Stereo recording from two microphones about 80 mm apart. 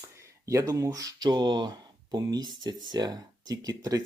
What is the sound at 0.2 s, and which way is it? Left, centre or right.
Speech, right.